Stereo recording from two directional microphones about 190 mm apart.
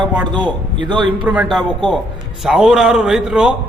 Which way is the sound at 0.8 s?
25° right (ahead or behind).